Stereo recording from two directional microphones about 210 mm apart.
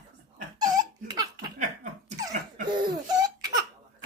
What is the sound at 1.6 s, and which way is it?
Laughter, 35° right (ahead or behind).